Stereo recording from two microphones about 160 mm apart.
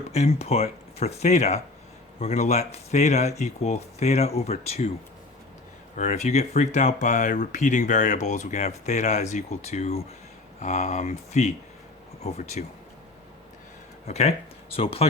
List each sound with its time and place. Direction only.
0.1 s speech: 40° left (ahead or behind)
6.0 s speech: 50° left (ahead or behind)
14.1 s speech: 45° left (ahead or behind)